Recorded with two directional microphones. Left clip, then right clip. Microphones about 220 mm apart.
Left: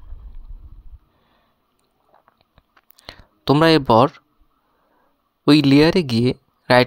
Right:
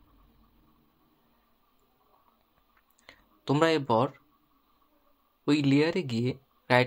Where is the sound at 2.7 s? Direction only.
40° left (ahead or behind).